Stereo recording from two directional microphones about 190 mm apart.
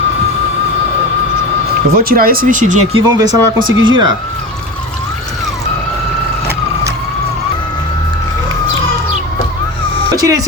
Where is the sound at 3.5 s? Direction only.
90° right.